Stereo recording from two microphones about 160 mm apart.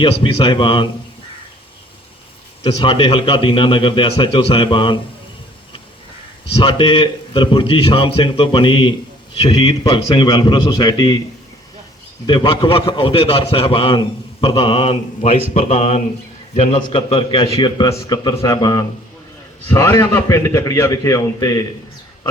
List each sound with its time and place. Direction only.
0.0 s a man's voice: 30° left (ahead or behind)
2.6 s a man's voice: 35° left (ahead or behind)
6.6 s a man's voice: 30° left (ahead or behind)
12.2 s a man's voice: 30° left (ahead or behind)